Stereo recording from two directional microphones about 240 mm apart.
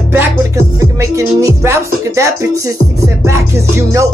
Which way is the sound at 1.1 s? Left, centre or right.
Centre.